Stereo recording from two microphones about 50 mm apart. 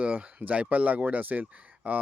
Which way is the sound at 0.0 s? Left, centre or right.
Right.